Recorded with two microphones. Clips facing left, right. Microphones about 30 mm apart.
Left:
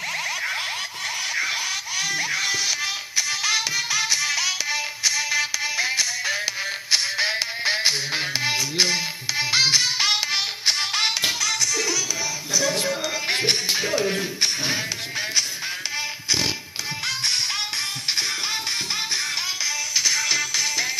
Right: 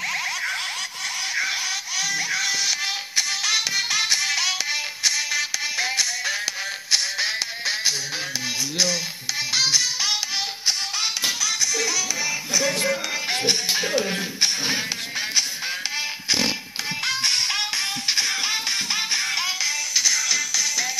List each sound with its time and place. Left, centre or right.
1.3 s a sound: centre
2.0 s music: centre
3.7 s music: centre
5.3 s music: centre
7.6 s music: left
8.5 s music: left
9.4 s music: left
11.7 s music: right
13.3 s music: centre
13.7 s music: centre
17.1 s music: right
18.9 s music: centre
20.0 s music: left